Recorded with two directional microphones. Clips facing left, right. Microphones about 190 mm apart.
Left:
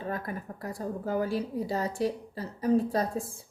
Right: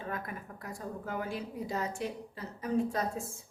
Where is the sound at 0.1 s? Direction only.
35° left (ahead or behind).